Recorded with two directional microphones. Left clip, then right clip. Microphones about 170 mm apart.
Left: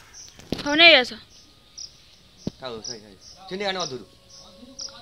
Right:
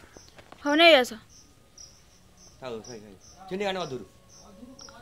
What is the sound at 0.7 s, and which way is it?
Speech, 10° right (ahead or behind).